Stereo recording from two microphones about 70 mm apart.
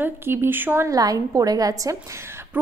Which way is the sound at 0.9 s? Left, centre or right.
Right.